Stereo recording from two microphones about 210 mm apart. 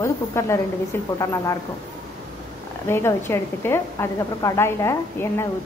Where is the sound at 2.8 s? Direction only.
10° left (ahead or behind).